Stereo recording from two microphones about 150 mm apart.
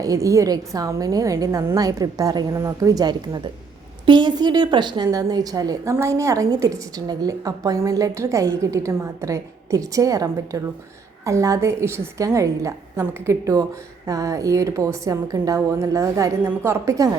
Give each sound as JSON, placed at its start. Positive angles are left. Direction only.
{"t": 0.0, "sound": "a woman's voice", "side_deg": -20}